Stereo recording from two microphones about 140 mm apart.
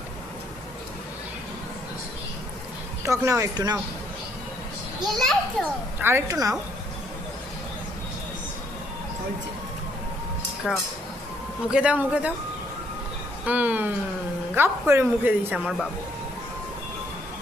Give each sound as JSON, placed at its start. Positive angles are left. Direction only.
{"t": 3.0, "sound": "speech", "side_deg": -20}
{"t": 5.2, "sound": "a child's voice", "side_deg": 0}
{"t": 6.0, "sound": "speech", "side_deg": -15}
{"t": 10.6, "sound": "a child's voice", "side_deg": 0}
{"t": 11.7, "sound": "a woman's voice", "side_deg": -10}
{"t": 13.4, "sound": "a woman's voice", "side_deg": -10}